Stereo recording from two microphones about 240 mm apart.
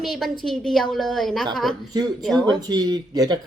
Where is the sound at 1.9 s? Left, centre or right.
Centre.